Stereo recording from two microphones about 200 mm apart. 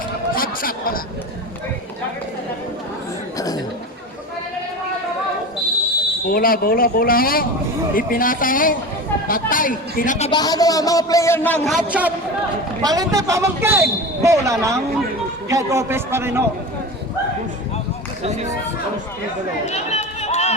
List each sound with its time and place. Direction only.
0.3 s chatter: 45° left (ahead or behind)
3.3 s chuckle: 20° left (ahead or behind)
6.2 s speech: 45° left (ahead or behind)
10.3 s a man's voice: 20° left (ahead or behind); by 12.1 s 5° right (ahead or behind)
12.8 s a man's voice: 20° right (ahead or behind)
18.2 s speech: 35° right (ahead or behind)
19.6 s run: 35° left (ahead or behind)